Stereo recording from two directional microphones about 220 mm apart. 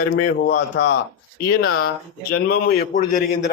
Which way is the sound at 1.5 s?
70° left (ahead or behind).